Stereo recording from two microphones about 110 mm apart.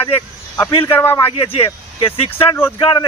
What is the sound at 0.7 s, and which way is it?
Speech, 55° left (ahead or behind).